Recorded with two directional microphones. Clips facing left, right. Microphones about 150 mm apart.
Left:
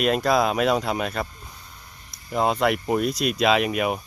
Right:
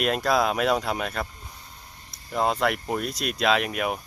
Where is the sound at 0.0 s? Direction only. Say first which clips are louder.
Left 3 dB; centre (ahead or behind).